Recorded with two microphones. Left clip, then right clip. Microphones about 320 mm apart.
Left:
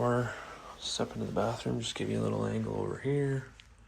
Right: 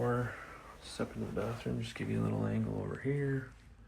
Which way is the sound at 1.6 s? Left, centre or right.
Left.